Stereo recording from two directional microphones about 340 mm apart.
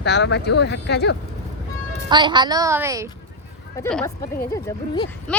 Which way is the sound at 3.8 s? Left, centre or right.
Centre.